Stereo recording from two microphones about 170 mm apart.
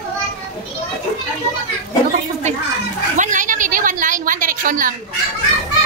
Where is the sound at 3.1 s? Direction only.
50° right (ahead or behind).